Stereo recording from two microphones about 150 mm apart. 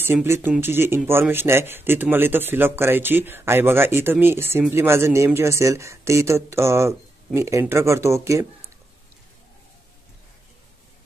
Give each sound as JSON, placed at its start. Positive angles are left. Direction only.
{"t": 0.0, "sound": "speech", "side_deg": -15}